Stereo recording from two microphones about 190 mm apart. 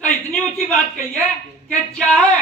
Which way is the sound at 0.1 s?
10° left (ahead or behind).